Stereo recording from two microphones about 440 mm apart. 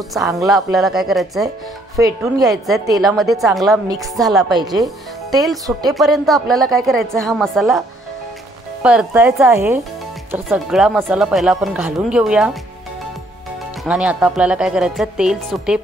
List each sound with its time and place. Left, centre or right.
0.1 s a woman's voice: centre
8.8 s a woman's voice: centre
13.8 s a woman's voice: centre